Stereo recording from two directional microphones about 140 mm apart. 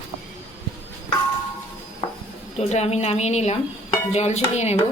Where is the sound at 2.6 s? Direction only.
50° left (ahead or behind).